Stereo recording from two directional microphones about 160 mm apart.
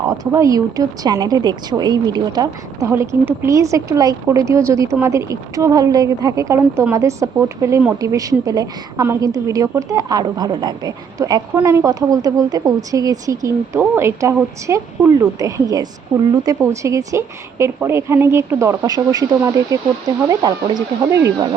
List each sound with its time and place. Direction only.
0.3 s a woman's voice: 20° right (ahead or behind)